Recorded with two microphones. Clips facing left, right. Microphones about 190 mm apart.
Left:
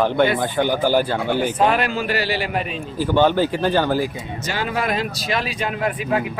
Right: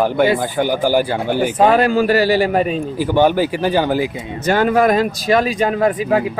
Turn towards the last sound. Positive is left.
turn(degrees=-45)  # may be behind; listen again after turning